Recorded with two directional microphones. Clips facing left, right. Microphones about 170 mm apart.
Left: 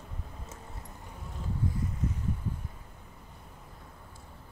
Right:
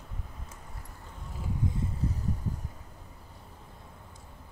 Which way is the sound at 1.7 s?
35° right (ahead or behind).